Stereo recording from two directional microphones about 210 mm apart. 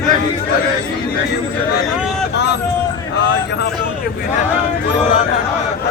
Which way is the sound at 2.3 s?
55° left (ahead or behind).